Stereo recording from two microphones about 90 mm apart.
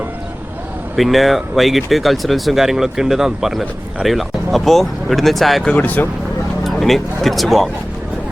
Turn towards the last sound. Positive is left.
turn(degrees=0)  # may be behind; listen again after turning